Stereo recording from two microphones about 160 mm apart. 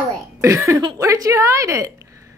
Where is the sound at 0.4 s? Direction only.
20° right (ahead or behind).